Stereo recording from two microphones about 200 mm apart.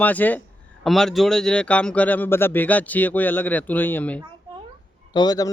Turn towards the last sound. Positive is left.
turn(degrees=20)  # may be behind; listen again after turning